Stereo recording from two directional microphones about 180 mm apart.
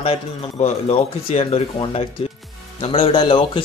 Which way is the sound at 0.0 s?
35° left (ahead or behind).